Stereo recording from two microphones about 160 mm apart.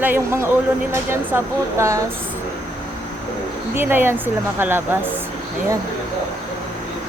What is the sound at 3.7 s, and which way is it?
Speech, 15° right (ahead or behind).